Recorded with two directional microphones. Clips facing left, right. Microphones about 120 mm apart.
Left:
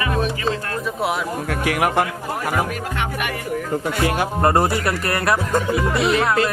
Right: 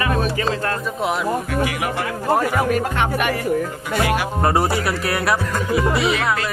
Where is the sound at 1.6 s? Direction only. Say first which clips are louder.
Left 3 dB; 55° left (ahead or behind).